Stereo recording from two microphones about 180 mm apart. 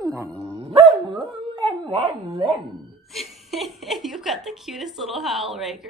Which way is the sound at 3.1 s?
Centre (ahead or behind).